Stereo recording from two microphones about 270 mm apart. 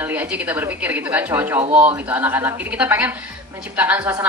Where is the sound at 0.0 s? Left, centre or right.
Centre.